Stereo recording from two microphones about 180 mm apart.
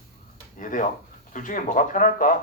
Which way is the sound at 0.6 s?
45° left (ahead or behind).